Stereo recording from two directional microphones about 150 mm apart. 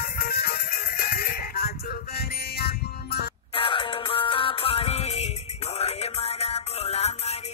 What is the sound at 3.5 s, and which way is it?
Music, 35° left (ahead or behind).